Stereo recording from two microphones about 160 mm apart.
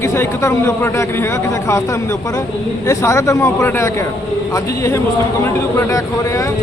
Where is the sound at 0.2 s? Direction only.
15° left (ahead or behind).